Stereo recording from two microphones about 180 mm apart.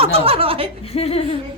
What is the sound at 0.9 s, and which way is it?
Speech, 35° left (ahead or behind).